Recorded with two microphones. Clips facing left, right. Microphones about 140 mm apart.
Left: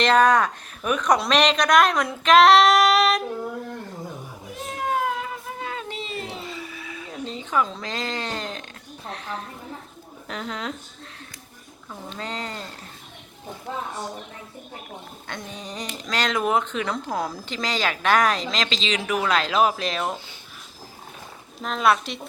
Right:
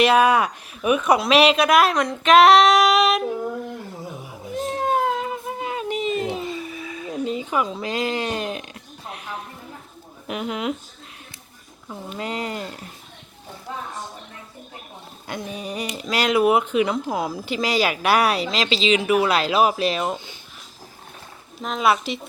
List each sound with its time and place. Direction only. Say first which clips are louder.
0.0 s a woman's voice: right 1 dB; 10° right (ahead or behind)
4.6 s a sound: right 4 dB; 30° right (ahead or behind)
7.3 s speech: even; 15° right (ahead or behind)
10.2 s speech: right 5 dB; 10° right (ahead or behind)
11.9 s speech: right 4 dB; 10° right (ahead or behind)
15.3 s speech: right 6 dB; 10° right (ahead or behind)
21.6 s a woman's voice: right 1 dB; 5° right (ahead or behind)